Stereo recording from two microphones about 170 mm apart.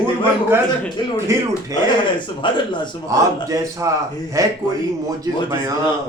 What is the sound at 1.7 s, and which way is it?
Speech, 20° right (ahead or behind).